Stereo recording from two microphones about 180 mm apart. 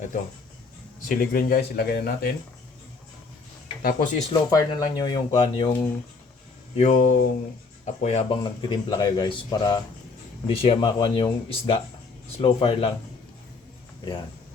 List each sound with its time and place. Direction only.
1.0 s speech: 50° left (ahead or behind)
3.8 s speech: 45° left (ahead or behind)
4.3 s speech: 20° left (ahead or behind)
6.7 s speech: 40° left (ahead or behind)